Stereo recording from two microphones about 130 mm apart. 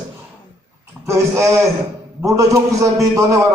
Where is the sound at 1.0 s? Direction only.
20° right (ahead or behind).